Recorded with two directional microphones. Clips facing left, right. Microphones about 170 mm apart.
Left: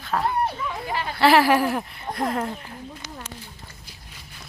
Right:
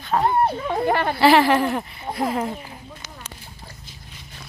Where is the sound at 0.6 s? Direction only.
60° right (ahead or behind).